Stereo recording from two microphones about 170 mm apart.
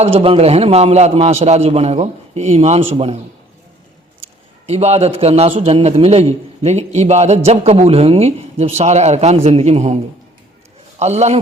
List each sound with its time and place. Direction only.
0.0 s a man's voice: 35° right (ahead or behind)
4.2 s a man's voice: 40° right (ahead or behind)
11.0 s a man's voice: 40° right (ahead or behind)